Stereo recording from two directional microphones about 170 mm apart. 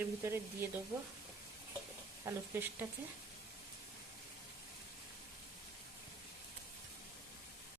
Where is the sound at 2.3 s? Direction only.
15° right (ahead or behind).